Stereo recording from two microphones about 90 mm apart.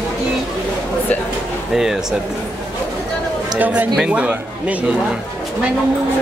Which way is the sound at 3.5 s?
20° right (ahead or behind).